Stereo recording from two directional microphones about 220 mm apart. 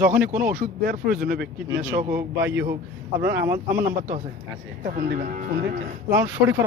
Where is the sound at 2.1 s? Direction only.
10° right (ahead or behind).